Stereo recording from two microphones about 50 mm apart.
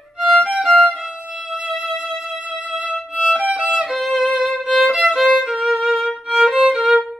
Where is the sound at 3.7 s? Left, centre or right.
Centre.